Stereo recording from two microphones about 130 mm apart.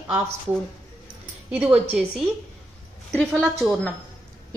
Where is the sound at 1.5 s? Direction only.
10° right (ahead or behind).